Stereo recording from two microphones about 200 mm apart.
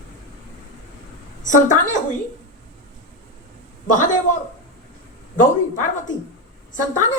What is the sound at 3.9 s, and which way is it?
A woman's voice, 40° left (ahead or behind).